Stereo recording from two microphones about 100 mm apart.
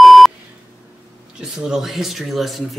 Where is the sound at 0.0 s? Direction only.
Centre (ahead or behind).